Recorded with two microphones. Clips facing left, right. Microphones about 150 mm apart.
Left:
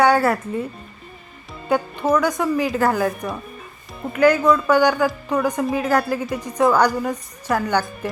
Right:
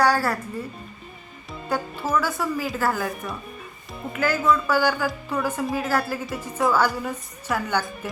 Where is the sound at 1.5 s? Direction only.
Centre (ahead or behind).